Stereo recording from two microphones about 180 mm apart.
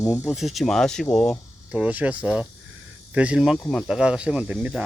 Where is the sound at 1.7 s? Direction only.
5° right (ahead or behind).